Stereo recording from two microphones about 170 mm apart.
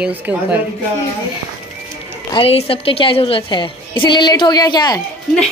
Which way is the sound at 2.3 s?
35° left (ahead or behind).